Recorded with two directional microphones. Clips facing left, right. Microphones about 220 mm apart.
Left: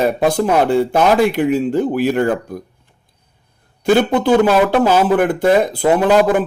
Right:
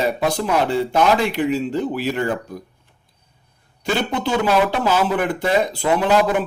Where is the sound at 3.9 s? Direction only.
50° left (ahead or behind).